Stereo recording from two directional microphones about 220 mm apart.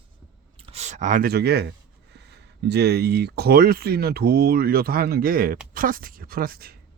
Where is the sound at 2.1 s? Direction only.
50° right (ahead or behind).